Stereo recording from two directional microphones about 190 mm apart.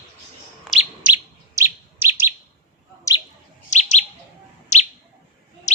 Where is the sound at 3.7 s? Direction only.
40° left (ahead or behind).